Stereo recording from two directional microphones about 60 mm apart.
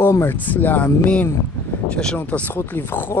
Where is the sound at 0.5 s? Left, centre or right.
Left.